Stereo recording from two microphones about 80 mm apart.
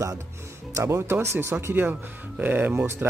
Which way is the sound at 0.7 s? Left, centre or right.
Right.